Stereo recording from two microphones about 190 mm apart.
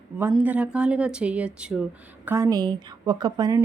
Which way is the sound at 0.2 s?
10° right (ahead or behind).